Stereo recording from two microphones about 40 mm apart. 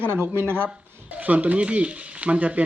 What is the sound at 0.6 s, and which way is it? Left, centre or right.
Speech, right.